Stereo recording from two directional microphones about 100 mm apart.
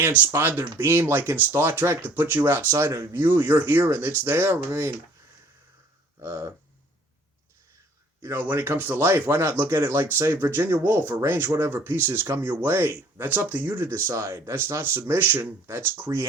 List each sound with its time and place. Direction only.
0.0 s speech: 20° right (ahead or behind)
6.1 s a sound: 30° right (ahead or behind)
8.2 s speech: 25° right (ahead or behind)